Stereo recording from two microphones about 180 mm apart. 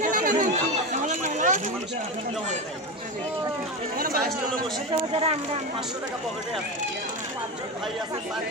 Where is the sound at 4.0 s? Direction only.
55° right (ahead or behind).